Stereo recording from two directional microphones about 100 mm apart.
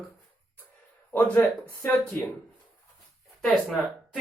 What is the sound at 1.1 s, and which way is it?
Speech, 15° left (ahead or behind).